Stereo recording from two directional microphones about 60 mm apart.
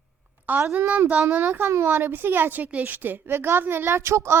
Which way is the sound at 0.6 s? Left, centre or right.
Right.